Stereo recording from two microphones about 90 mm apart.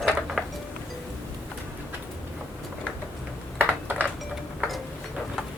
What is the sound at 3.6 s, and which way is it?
Typing, 20° right (ahead or behind).